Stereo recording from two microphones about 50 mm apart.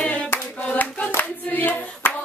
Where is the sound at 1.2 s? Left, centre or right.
Left.